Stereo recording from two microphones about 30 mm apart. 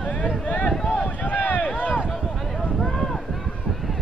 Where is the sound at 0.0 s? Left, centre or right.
Left.